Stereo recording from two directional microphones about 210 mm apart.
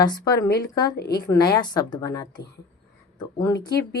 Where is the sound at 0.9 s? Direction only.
50° left (ahead or behind).